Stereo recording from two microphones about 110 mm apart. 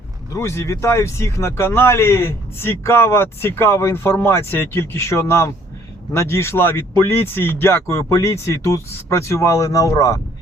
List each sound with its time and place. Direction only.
0.3 s speech: 25° left (ahead or behind)